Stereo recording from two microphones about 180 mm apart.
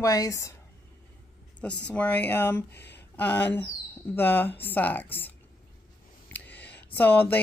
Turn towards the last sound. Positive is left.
turn(degrees=10)  # may be behind; listen again after turning